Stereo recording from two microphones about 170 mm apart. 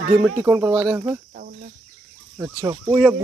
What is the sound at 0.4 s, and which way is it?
Speech, 15° right (ahead or behind).